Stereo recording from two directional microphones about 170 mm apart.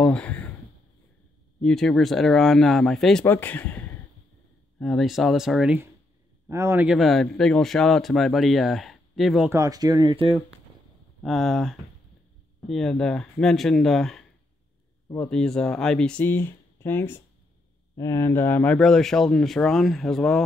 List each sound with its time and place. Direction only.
0.0 s a sound: 5° left (ahead or behind)
1.6 s speech: 5° left (ahead or behind)
9.5 s speech: 20° right (ahead or behind)
11.2 s speech: centre (ahead or behind)